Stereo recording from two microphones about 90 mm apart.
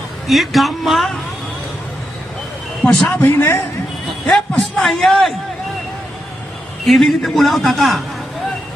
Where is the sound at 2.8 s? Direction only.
5° left (ahead or behind).